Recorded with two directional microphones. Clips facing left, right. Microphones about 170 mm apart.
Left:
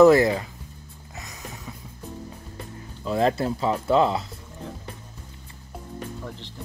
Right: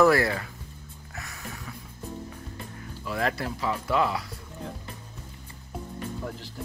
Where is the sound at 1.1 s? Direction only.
20° left (ahead or behind).